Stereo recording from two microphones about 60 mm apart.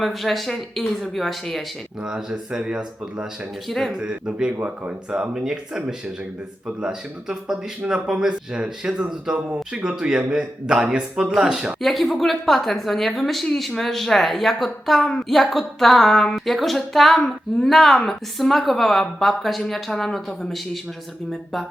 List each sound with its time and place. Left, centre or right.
0.0 s a woman's voice: centre
2.0 s speech: centre
3.7 s a woman's voice: centre
3.9 s speech: centre
5.3 s speech: centre
11.8 s a woman's voice: centre